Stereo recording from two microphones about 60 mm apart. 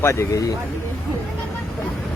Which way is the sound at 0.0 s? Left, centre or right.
Left.